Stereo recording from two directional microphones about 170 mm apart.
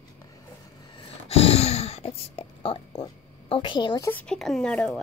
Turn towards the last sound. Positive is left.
turn(degrees=5)  # may be behind; listen again after turning